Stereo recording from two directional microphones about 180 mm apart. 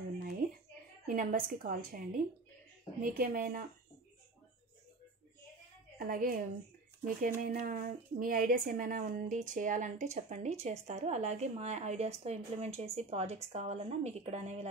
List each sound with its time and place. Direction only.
1.0 s a woman's voice: 50° right (ahead or behind)
5.9 s a woman's voice: 50° right (ahead or behind); by 14.7 s 35° right (ahead or behind)